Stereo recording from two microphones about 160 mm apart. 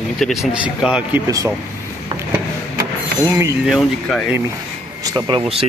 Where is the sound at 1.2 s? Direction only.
20° right (ahead or behind).